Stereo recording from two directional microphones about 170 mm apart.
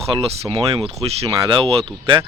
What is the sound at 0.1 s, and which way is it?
Speech, 30° right (ahead or behind).